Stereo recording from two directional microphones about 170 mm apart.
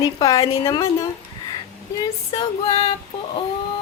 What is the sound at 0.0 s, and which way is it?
A woman's voice, 20° left (ahead or behind).